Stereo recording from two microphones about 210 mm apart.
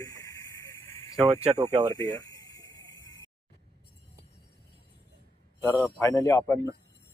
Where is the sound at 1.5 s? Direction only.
25° right (ahead or behind).